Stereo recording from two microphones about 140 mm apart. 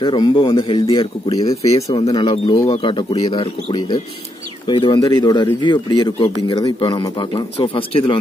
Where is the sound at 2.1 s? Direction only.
35° left (ahead or behind).